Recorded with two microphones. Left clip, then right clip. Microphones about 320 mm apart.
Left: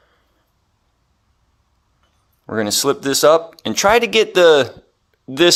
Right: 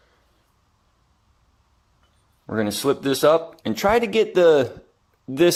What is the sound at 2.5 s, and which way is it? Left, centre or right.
Speech, left.